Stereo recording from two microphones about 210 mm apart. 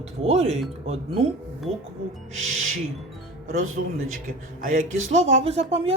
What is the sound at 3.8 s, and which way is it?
Speech, 55° right (ahead or behind).